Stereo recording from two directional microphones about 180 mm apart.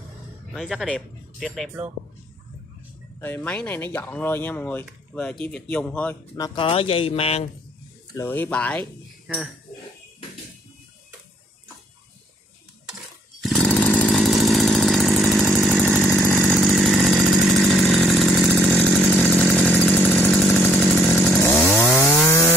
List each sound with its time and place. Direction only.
0.5 s speech: 5° left (ahead or behind)
3.2 s speech: 10° left (ahead or behind)
6.3 s speech: 25° left (ahead or behind)
8.1 s speech: 15° left (ahead or behind)
13.4 s chainsaw: 5° left (ahead or behind)
16.1 s chainsaw: 10° left (ahead or behind)
16.3 s chainsaw: centre (ahead or behind)